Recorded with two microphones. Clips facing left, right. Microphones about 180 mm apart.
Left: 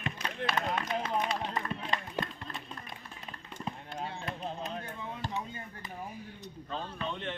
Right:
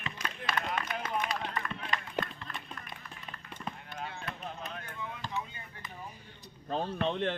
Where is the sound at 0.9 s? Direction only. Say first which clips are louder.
Left 3 dB; 30° left (ahead or behind).